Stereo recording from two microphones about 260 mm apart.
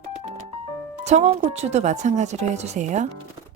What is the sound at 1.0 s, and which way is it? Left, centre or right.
Speech, right.